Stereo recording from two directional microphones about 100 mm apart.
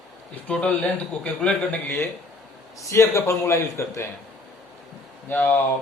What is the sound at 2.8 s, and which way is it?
Speech, 30° left (ahead or behind).